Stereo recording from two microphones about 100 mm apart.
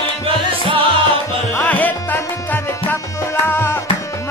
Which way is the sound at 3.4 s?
20° left (ahead or behind).